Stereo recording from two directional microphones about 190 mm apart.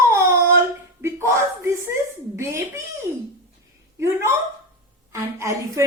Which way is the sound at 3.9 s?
15° right (ahead or behind).